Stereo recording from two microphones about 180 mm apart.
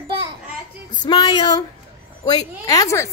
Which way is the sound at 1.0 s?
25° left (ahead or behind).